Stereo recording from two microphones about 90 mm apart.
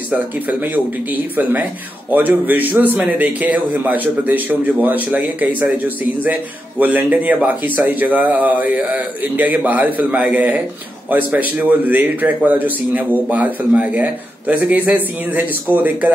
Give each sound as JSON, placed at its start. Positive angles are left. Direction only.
{"t": 1.1, "sound": "speech", "side_deg": -20}
{"t": 6.8, "sound": "speech", "side_deg": -20}